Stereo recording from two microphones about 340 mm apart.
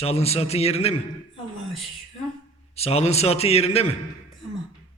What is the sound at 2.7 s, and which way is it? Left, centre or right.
A man's voice, centre.